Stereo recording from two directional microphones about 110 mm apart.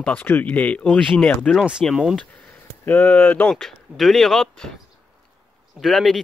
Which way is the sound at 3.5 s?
5° left (ahead or behind).